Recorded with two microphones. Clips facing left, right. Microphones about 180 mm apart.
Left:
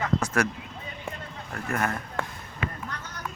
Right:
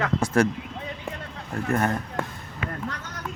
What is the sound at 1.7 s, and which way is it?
Speech, 35° right (ahead or behind).